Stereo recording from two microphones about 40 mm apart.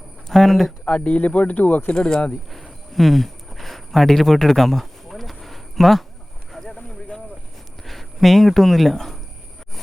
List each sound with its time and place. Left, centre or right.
0.3 s speech: centre
0.9 s speech: left
1.9 s speech: left
2.5 s a sound: centre
4.3 s speech: centre
5.1 s a sound: centre
7.9 s speech: centre